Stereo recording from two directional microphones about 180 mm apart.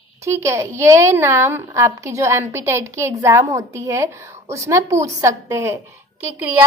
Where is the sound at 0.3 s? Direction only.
15° right (ahead or behind).